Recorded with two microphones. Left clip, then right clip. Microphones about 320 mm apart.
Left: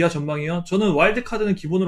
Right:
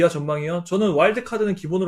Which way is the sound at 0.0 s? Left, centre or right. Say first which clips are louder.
Right 2 dB; left.